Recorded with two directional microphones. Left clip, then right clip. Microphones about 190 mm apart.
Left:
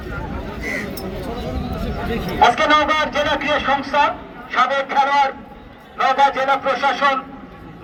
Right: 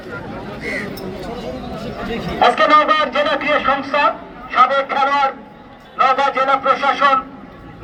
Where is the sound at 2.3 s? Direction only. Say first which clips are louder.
Right 2 dB; 5° right (ahead or behind).